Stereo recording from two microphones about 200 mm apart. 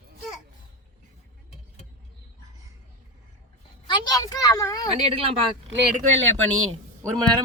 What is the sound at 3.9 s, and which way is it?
Speech, 20° left (ahead or behind).